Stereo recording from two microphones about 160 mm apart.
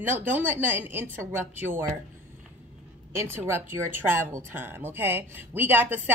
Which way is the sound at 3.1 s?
15° right (ahead or behind).